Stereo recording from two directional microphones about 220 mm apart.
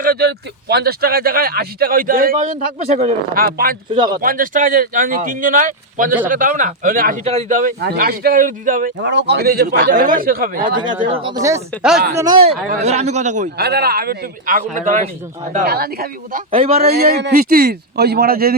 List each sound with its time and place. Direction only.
0.0 s speech: 45° right (ahead or behind)
3.4 s speech: 40° right (ahead or behind)
3.9 s speech: 20° right (ahead or behind)
4.2 s speech: 40° right (ahead or behind)
9.0 s speech: 50° right (ahead or behind)
11.1 s speech: 25° right (ahead or behind)
11.8 s speech: 5° right (ahead or behind)
12.5 s speech: 30° right (ahead or behind)
15.5 s speech: 45° right (ahead or behind)
16.5 s speech: 25° right (ahead or behind)
16.8 s speech: 45° right (ahead or behind)